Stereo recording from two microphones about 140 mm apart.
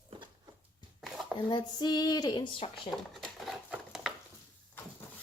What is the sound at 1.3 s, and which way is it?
Speech, 30° left (ahead or behind).